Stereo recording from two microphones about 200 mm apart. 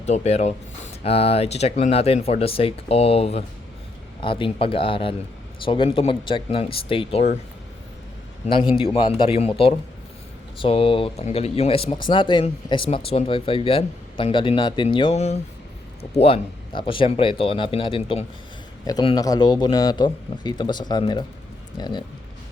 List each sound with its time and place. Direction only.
0.0 s speech: 30° left (ahead or behind)
8.7 s speech: 25° left (ahead or behind)